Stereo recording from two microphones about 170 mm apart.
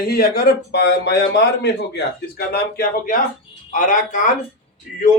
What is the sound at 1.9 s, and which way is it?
A man's voice, 70° left (ahead or behind).